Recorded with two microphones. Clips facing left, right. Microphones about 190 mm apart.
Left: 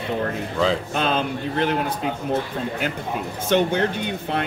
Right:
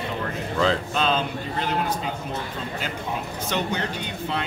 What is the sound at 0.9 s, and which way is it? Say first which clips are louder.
Speech: left 1 dB; 55° left (ahead or behind).